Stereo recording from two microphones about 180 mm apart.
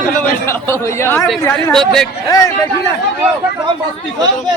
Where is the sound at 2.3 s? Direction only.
20° left (ahead or behind).